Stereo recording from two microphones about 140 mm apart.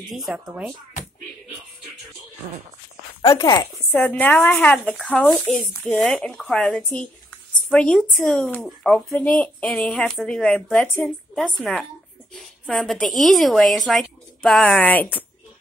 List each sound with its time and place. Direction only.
0.1 s speech: centre (ahead or behind)
3.2 s speech: 25° left (ahead or behind)
3.9 s a woman's voice: 10° left (ahead or behind)